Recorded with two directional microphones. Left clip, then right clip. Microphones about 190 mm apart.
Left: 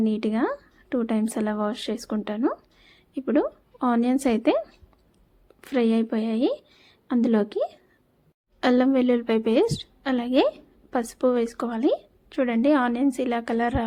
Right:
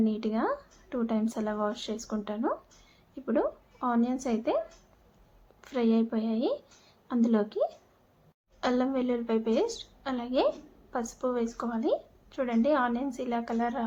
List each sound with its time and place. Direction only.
0.0 s a woman's voice: 35° left (ahead or behind)